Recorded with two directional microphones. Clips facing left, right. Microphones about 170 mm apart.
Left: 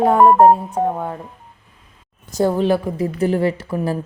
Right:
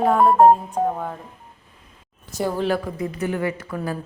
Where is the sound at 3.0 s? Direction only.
35° left (ahead or behind).